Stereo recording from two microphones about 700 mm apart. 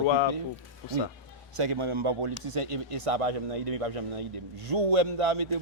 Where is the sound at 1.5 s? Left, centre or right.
Right.